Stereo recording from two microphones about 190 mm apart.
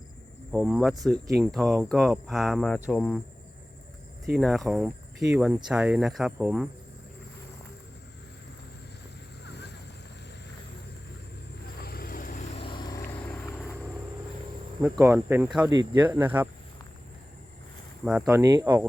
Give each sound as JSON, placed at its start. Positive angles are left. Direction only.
{"t": 0.5, "sound": "speech", "side_deg": -5}
{"t": 4.4, "sound": "speech", "side_deg": 0}
{"t": 11.8, "sound": "vehicle", "side_deg": 55}
{"t": 13.2, "sound": "vehicle", "side_deg": 10}
{"t": 14.9, "sound": "speech", "side_deg": -15}
{"t": 15.7, "sound": "speech", "side_deg": -20}
{"t": 16.0, "sound": "speech", "side_deg": -10}
{"t": 18.0, "sound": "speech", "side_deg": -5}